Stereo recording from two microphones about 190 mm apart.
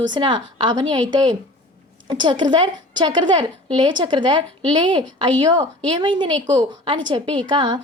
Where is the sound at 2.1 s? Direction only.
25° right (ahead or behind).